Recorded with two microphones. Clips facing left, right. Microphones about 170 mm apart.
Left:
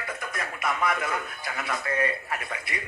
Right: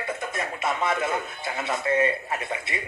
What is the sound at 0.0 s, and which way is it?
Speech, 25° right (ahead or behind).